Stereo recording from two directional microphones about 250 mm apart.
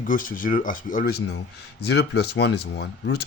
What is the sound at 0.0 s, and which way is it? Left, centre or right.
Speech, left.